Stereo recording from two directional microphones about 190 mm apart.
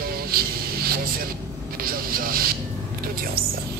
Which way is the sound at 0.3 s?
50° right (ahead or behind).